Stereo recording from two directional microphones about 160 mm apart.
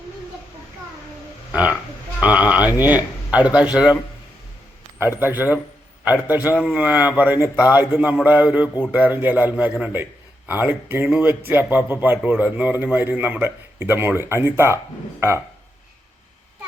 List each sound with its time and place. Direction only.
2.2 s a man's voice: 10° right (ahead or behind)
5.2 s a man's voice: 10° right (ahead or behind)